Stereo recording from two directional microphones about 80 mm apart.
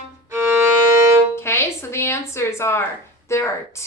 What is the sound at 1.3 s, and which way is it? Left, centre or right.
Music, left.